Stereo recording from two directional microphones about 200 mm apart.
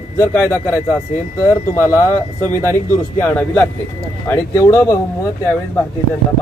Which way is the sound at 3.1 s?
10° left (ahead or behind).